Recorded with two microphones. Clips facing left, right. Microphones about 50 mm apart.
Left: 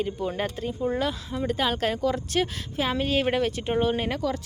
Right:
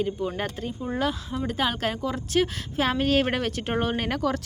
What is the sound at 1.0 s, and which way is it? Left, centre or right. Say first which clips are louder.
A woman's voice: right 1 dB; right.